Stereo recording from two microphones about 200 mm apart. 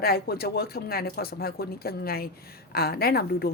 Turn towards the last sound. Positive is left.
turn(degrees=50)  # may be behind; listen again after turning